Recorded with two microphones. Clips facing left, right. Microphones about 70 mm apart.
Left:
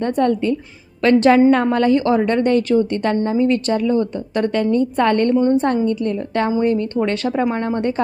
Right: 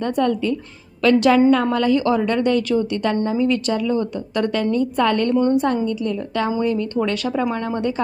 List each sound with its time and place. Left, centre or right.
0.0 s a woman's voice: left
5.3 s a woman's voice: left
5.6 s a woman's voice: left